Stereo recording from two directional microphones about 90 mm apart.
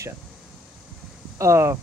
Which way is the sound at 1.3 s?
35° right (ahead or behind).